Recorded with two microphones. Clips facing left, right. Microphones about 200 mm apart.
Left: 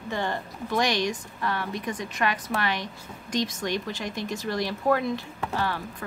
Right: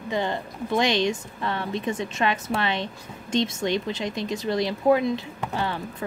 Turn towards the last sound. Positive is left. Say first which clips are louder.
# right 1 dB
turn(degrees=-20)  # may be behind; listen again after turning